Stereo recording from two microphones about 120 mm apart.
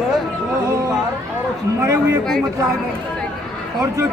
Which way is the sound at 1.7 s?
20° right (ahead or behind).